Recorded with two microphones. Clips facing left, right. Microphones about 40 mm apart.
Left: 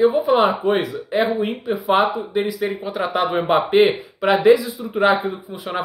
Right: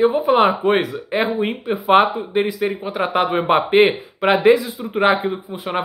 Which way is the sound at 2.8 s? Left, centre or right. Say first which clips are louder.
Right 2 dB; right.